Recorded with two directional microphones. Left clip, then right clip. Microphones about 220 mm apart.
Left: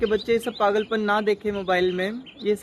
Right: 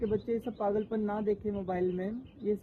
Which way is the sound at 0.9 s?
15° left (ahead or behind).